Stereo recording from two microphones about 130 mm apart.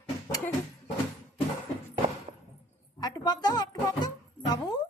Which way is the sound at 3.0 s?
30° left (ahead or behind).